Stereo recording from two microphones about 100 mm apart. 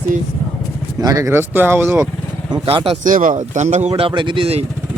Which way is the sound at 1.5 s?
20° right (ahead or behind).